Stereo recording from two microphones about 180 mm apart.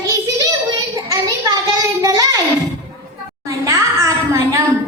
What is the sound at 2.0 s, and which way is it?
Child singing, 20° right (ahead or behind).